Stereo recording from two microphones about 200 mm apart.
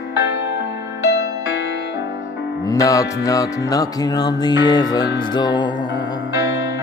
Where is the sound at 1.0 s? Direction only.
60° left (ahead or behind).